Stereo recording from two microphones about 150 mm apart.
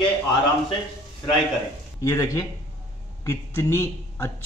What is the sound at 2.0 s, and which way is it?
A man's voice, 20° left (ahead or behind).